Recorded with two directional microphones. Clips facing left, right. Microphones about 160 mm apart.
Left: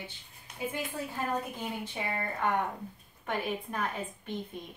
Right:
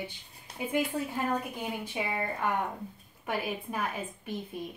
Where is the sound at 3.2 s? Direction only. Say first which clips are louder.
Even; 10° right (ahead or behind).